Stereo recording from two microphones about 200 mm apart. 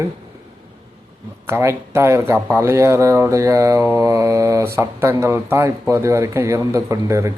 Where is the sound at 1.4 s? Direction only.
15° right (ahead or behind).